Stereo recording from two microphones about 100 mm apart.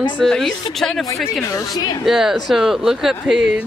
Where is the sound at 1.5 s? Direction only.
40° left (ahead or behind).